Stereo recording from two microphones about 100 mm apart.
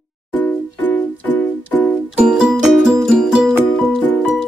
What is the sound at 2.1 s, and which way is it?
Music, 5° right (ahead or behind).